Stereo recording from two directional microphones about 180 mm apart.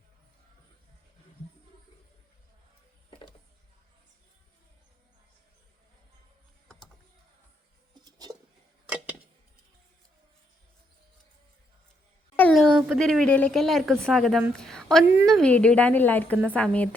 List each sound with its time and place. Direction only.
8.0 s a sound: 20° right (ahead or behind)
12.4 s a woman's voice: 5° left (ahead or behind)
15.0 s a woman's voice: 10° right (ahead or behind)
15.3 s a woman's voice: 5° left (ahead or behind)